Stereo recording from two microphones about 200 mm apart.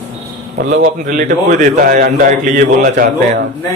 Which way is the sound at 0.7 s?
45° right (ahead or behind).